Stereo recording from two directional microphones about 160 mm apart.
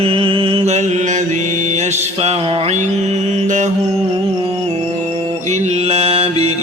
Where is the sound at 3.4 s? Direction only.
50° right (ahead or behind).